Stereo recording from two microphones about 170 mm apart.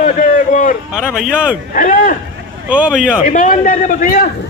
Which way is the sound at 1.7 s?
50° left (ahead or behind).